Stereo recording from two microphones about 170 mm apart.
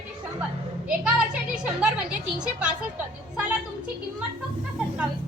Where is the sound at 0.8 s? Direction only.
5° right (ahead or behind).